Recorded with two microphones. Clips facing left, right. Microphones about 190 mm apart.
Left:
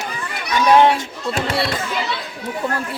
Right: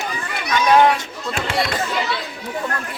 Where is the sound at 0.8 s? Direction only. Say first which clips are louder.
Left 1 dB; 30° left (ahead or behind).